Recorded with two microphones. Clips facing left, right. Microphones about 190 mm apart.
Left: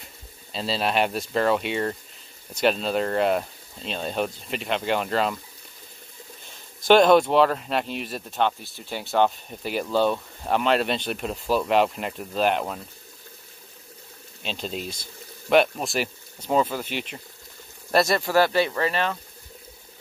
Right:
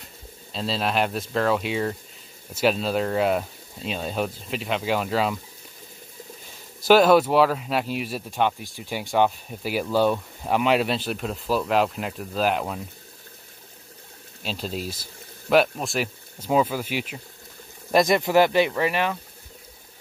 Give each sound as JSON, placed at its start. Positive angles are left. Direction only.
{"t": 0.0, "sound": "speech", "side_deg": 0}
{"t": 6.8, "sound": "speech", "side_deg": -5}
{"t": 14.4, "sound": "speech", "side_deg": -5}
{"t": 17.9, "sound": "speech", "side_deg": -15}